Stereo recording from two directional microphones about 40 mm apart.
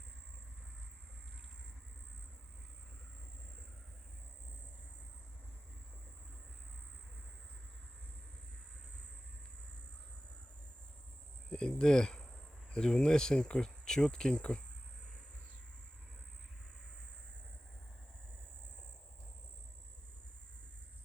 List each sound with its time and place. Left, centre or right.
11.4 s speech: left